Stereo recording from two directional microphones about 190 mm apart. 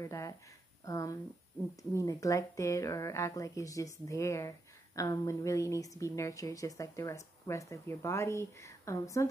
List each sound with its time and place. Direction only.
0.0 s speech: 15° left (ahead or behind)